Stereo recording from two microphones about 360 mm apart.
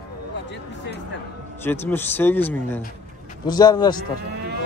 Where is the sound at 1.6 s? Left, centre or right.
Centre.